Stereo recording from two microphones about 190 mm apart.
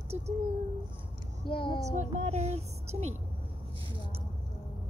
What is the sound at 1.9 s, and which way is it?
A woman's voice, 35° right (ahead or behind).